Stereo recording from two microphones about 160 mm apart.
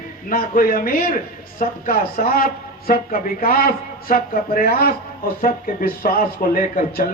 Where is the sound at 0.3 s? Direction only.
60° left (ahead or behind).